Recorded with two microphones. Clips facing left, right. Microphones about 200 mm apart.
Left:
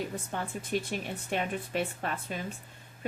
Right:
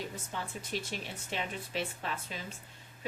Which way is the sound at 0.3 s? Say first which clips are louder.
Left 5 dB; 50° left (ahead or behind).